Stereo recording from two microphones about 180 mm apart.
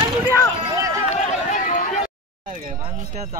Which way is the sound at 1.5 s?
45° left (ahead or behind).